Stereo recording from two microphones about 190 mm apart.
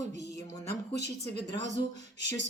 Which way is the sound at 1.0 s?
60° left (ahead or behind).